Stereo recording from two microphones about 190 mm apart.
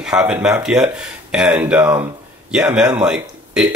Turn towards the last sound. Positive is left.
turn(degrees=-5)  # may be behind; listen again after turning